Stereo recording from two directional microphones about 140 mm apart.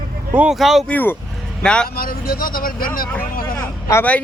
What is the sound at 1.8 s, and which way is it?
Speech, 90° left.